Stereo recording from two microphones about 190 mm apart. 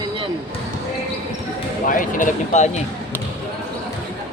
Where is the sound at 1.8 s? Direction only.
45° left (ahead or behind).